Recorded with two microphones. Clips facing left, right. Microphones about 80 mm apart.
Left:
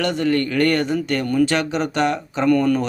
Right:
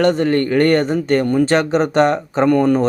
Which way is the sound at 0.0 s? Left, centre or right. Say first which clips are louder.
Right 5 dB; right.